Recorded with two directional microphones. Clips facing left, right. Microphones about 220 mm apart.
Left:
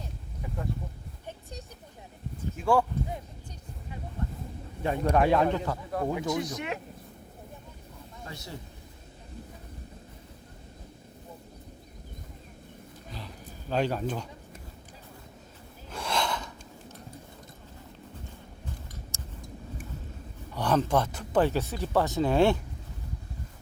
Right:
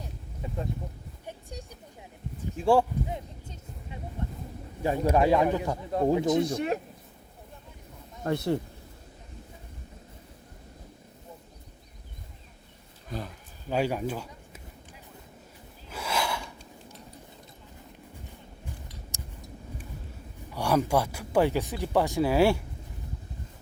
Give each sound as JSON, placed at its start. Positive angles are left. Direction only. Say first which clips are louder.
{"t": 0.4, "sound": "a sound", "louder": "right 2 dB", "side_deg": -25}
{"t": 1.3, "sound": "a sound", "louder": "right 1 dB", "side_deg": -10}
{"t": 2.6, "sound": "speech", "louder": "right 3 dB", "side_deg": -30}
{"t": 4.8, "sound": "speech", "louder": "right 1 dB", "side_deg": -10}
{"t": 5.7, "sound": "speech", "louder": "right 5 dB", "side_deg": -25}
{"t": 8.2, "sound": "speech", "louder": "right 16 dB", "side_deg": -60}
{"t": 13.1, "sound": "speech", "louder": "right 7 dB", "side_deg": -45}
{"t": 13.7, "sound": "speech", "louder": "right 1 dB", "side_deg": -10}
{"t": 15.9, "sound": "gasp", "louder": "even", "side_deg": -5}
{"t": 19.1, "sound": "a sound", "louder": "even", "side_deg": -15}
{"t": 20.5, "sound": "speech", "louder": "right 1 dB", "side_deg": -10}